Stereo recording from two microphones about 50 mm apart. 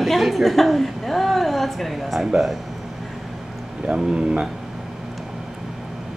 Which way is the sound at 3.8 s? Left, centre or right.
Centre.